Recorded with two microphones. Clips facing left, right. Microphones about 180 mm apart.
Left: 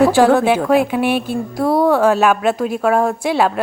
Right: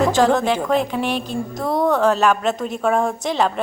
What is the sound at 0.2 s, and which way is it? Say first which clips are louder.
A woman's voice: left 4 dB; 10° left (ahead or behind).